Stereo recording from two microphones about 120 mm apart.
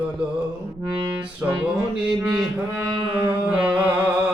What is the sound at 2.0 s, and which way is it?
Mantra, 5° right (ahead or behind).